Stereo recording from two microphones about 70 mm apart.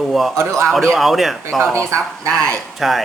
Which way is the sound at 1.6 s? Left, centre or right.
Right.